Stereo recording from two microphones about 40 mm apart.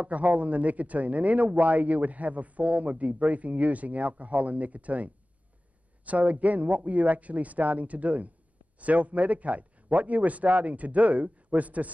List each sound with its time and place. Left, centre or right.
0.0 s speech: right